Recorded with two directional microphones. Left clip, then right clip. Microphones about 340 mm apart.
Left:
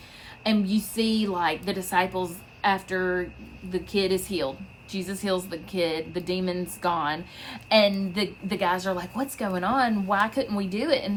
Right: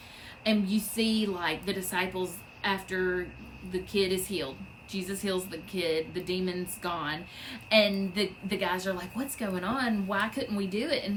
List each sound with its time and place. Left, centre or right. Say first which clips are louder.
0.4 s a woman's voice: left 3 dB; centre